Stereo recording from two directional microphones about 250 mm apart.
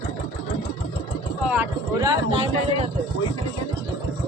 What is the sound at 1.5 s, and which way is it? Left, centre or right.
Speech, centre.